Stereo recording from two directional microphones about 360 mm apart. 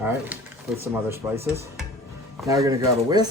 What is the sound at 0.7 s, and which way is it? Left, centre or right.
Speech, centre.